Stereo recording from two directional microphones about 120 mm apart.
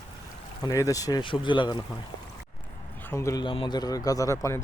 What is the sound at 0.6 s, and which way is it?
Speech, 30° left (ahead or behind).